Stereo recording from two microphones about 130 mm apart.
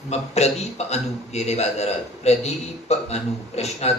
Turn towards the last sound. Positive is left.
turn(degrees=55)  # may be behind; listen again after turning